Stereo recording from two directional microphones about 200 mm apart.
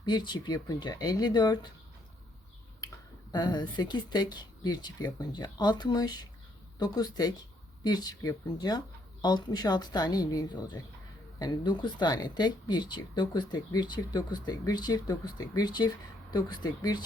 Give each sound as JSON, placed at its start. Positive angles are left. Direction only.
{"t": 0.0, "sound": "speech", "side_deg": 20}
{"t": 3.3, "sound": "speech", "side_deg": 20}